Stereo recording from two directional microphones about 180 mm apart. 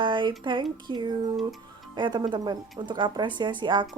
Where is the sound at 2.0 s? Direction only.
25° right (ahead or behind).